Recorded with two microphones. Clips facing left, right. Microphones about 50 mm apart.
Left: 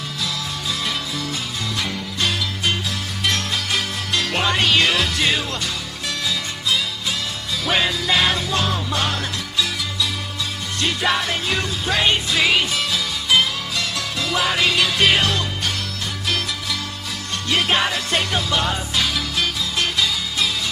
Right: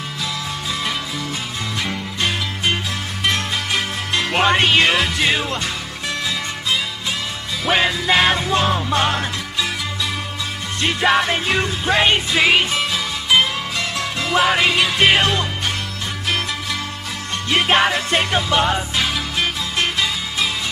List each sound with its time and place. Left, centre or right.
1.8 s music: right
7.6 s music: right
10.8 s music: right
17.5 s music: right